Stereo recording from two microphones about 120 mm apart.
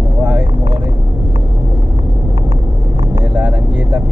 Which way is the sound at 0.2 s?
5° right (ahead or behind).